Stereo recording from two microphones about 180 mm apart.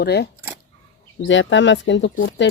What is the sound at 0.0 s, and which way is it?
Speech, 65° left (ahead or behind).